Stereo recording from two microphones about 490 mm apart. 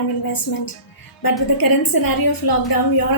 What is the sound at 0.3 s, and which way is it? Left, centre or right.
A woman's voice, left.